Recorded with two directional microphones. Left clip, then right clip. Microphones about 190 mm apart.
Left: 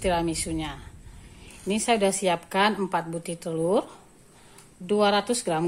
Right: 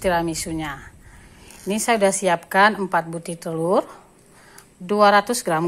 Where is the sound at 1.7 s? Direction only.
Centre (ahead or behind).